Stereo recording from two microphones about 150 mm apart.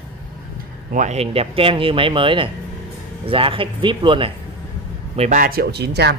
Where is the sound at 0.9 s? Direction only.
50° right (ahead or behind); by 4.3 s 35° right (ahead or behind).